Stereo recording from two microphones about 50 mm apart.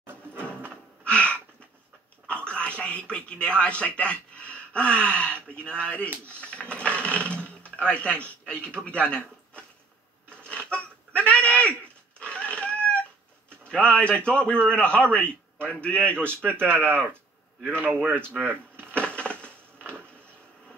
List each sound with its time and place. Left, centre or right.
0.0 s drawer open or close: right
1.0 s a sound: left
2.2 s a man's voice: left
10.3 s a sound: left
12.2 s dog: left
13.7 s a man's voice: left
16.6 s speech: right
18.4 s drawer open or close: right
18.9 s crushing: left